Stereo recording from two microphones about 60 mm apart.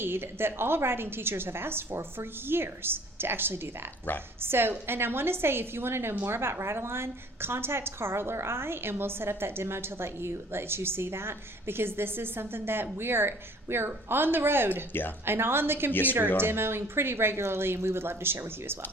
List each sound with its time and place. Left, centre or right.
0.0 s a woman's voice: right
15.9 s speech: left
16.4 s speech: right